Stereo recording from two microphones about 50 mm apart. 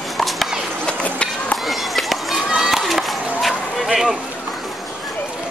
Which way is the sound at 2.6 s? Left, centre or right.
Centre.